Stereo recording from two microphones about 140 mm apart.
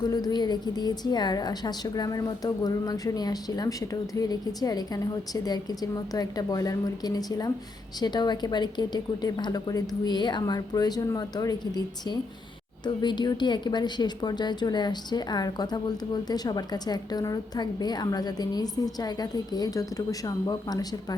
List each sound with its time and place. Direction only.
0.0 s a woman's voice: 30° left (ahead or behind)